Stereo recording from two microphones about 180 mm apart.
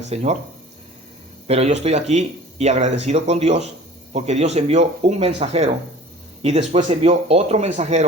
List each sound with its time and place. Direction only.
0.1 s speech: 35° right (ahead or behind)
1.5 s speech: 35° right (ahead or behind)